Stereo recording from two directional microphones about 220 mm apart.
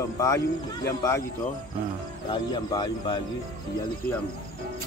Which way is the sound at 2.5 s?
20° left (ahead or behind).